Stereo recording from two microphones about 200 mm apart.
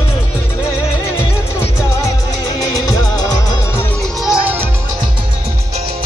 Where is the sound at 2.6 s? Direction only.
15° left (ahead or behind).